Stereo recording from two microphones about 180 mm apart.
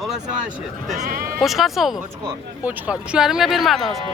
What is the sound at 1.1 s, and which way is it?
Bleat, 50° right (ahead or behind).